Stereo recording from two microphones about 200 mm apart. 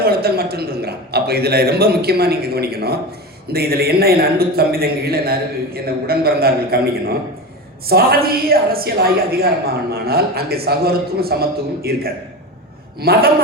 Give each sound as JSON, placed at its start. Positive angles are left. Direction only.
{"t": 0.0, "sound": "a man's voice", "side_deg": -50}
{"t": 7.9, "sound": "a man's voice", "side_deg": -50}
{"t": 13.0, "sound": "a man's voice", "side_deg": -50}